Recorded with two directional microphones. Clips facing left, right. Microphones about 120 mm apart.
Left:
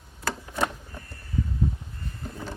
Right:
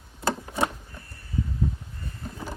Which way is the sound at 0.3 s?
25° right (ahead or behind).